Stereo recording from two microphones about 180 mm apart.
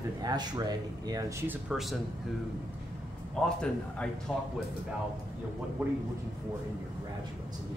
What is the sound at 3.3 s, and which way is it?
Speech, 5° left (ahead or behind).